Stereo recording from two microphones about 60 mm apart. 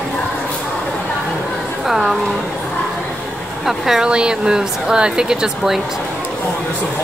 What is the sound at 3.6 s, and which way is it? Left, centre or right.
Speech, centre.